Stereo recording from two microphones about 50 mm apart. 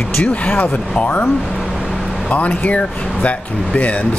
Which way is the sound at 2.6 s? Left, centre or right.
Left.